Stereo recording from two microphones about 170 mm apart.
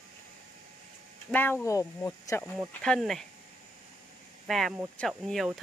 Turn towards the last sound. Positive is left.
turn(degrees=0)  # may be behind; listen again after turning